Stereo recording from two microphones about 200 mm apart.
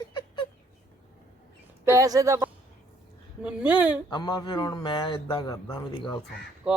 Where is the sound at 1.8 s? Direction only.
15° right (ahead or behind).